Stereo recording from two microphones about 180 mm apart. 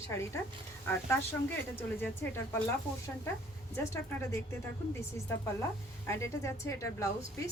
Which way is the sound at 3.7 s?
15° left (ahead or behind).